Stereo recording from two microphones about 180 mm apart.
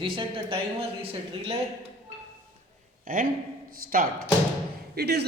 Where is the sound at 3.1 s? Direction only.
50° right (ahead or behind).